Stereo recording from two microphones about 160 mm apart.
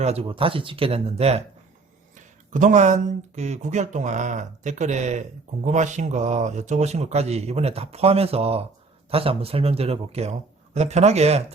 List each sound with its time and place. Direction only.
0.0 s speech: 40° right (ahead or behind)
2.1 s speech: 50° right (ahead or behind)